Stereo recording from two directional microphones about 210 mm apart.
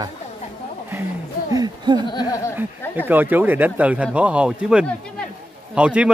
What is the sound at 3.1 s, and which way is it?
A man's voice, 10° right (ahead or behind).